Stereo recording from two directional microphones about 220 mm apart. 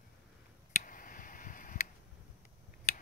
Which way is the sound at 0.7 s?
40° left (ahead or behind).